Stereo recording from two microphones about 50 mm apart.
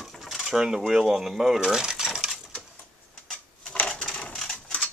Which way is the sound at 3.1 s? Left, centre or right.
Centre.